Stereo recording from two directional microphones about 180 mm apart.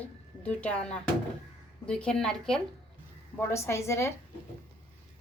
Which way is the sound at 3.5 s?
15° left (ahead or behind).